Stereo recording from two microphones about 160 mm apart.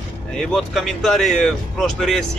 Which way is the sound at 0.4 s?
Centre (ahead or behind).